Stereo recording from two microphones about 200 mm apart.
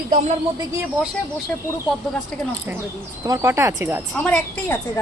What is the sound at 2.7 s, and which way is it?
Speech, 10° right (ahead or behind).